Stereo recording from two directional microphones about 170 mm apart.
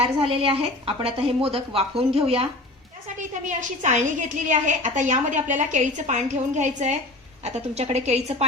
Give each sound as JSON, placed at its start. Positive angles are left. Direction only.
{"t": 0.3, "sound": "speech", "side_deg": -35}
{"t": 3.2, "sound": "a woman's voice", "side_deg": -45}